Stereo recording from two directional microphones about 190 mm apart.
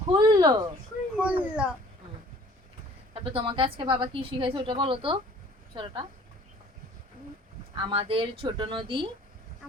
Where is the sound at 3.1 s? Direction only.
30° right (ahead or behind).